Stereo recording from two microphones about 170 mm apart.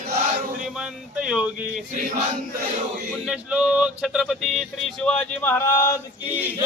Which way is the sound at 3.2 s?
5° right (ahead or behind).